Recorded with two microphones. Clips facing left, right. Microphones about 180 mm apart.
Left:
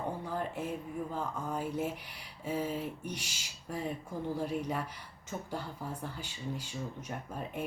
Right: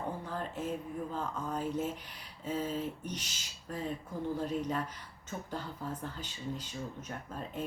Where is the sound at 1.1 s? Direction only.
10° left (ahead or behind).